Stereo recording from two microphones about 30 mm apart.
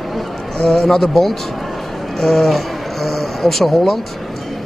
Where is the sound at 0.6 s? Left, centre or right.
Left.